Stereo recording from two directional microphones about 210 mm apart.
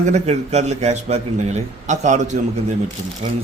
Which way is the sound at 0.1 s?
35° right (ahead or behind).